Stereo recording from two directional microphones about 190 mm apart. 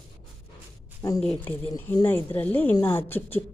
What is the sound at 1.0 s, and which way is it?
Speech, 20° left (ahead or behind).